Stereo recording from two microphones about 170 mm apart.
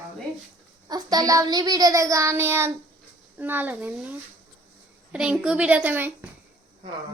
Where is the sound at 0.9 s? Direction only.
20° right (ahead or behind).